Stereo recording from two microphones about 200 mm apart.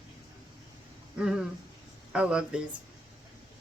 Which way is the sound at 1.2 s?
5° right (ahead or behind).